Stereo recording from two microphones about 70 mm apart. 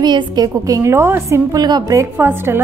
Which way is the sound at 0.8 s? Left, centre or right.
Right.